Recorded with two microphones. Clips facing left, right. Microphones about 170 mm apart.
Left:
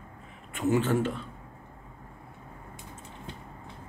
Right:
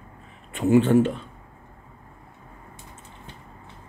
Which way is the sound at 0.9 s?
20° right (ahead or behind).